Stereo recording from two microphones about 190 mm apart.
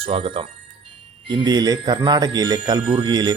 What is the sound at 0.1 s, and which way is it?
Speech, 30° right (ahead or behind).